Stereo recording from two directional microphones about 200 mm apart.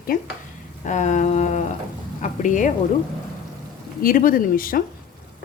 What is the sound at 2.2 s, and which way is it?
Speech, 40° left (ahead or behind).